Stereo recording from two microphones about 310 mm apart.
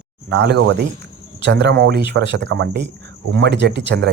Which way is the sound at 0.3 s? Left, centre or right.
Right.